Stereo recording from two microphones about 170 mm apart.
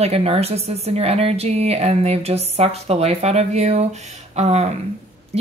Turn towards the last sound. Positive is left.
turn(degrees=-40)  # may be behind; listen again after turning